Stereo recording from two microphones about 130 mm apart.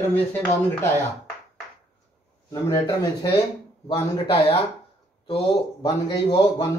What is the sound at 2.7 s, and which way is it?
A man's voice, 40° left (ahead or behind).